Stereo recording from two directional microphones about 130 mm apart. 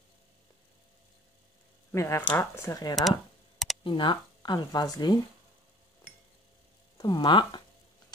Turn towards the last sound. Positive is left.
turn(degrees=35)  # may be behind; listen again after turning